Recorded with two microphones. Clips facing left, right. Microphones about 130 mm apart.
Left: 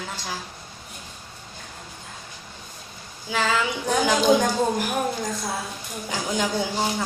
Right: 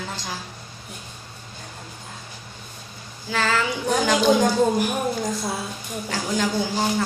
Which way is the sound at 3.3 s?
10° left (ahead or behind).